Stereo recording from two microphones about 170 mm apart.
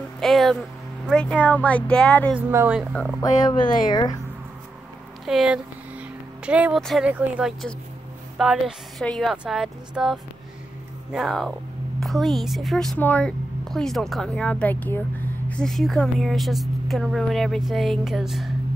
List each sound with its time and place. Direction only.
0.2 s speech: centre (ahead or behind)
2.3 s speech: 10° right (ahead or behind)
2.9 s speech: 5° left (ahead or behind)
3.2 s speech: 20° left (ahead or behind)
5.2 s a sound: 5° right (ahead or behind)
6.8 s a woman's voice: centre (ahead or behind)